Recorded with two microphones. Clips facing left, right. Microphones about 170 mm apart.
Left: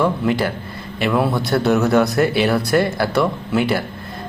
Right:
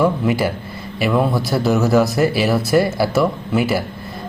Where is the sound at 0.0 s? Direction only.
10° right (ahead or behind).